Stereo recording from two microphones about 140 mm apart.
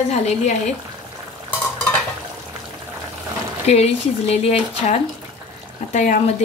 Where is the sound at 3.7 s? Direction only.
50° left (ahead or behind).